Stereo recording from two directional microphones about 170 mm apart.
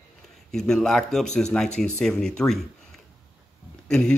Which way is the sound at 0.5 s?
5° left (ahead or behind).